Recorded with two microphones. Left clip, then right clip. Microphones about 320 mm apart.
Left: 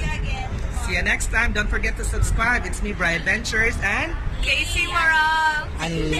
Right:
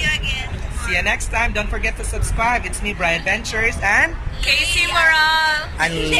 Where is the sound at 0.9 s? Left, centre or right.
Centre.